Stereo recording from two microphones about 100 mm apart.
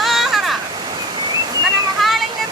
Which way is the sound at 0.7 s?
45° right (ahead or behind).